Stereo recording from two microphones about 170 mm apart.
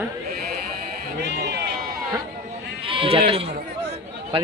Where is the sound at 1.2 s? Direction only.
80° right.